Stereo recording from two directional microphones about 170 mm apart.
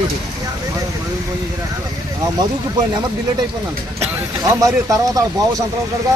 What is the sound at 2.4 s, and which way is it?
Speech, 25° right (ahead or behind).